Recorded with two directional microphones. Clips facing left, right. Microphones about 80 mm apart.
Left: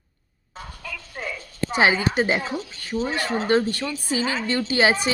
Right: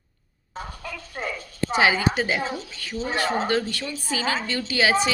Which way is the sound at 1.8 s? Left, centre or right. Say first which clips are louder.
Left 2 dB; left.